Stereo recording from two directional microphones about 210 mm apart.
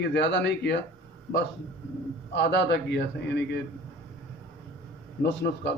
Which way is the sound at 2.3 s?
55° left (ahead or behind).